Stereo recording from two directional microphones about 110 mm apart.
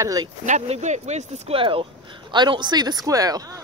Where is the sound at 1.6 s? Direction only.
55° right (ahead or behind).